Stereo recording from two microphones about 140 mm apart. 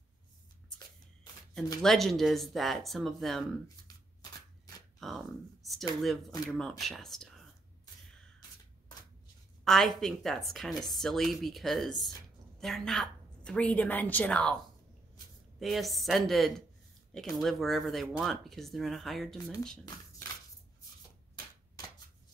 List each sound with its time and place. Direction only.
1.8 s speech: centre (ahead or behind)
3.6 s shuffling cards: 25° left (ahead or behind)
5.0 s speech: centre (ahead or behind)
9.7 s a woman's voice: centre (ahead or behind)
15.6 s speech: centre (ahead or behind)